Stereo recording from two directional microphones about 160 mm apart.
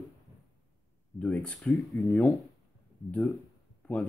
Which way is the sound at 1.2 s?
10° left (ahead or behind).